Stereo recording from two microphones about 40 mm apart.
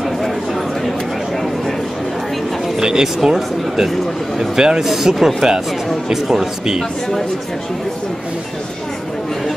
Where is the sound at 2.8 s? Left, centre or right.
Centre.